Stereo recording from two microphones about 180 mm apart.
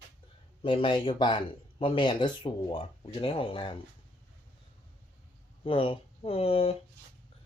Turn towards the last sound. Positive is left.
turn(degrees=35)  # may be behind; listen again after turning